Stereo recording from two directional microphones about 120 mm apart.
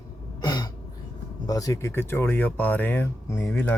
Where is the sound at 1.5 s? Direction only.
30° left (ahead or behind).